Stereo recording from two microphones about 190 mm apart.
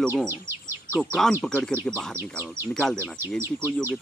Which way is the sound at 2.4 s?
10° right (ahead or behind).